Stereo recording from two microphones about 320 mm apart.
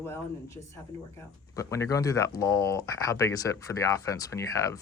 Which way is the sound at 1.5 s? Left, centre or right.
Centre.